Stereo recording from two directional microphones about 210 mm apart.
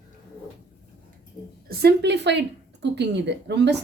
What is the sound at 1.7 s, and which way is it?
Speech, 50° right (ahead or behind).